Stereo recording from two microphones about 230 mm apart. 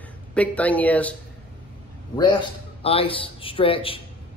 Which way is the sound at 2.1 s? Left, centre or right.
Centre.